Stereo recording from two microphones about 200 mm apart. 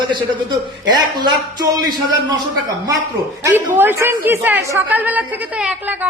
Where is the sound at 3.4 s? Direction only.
10° right (ahead or behind).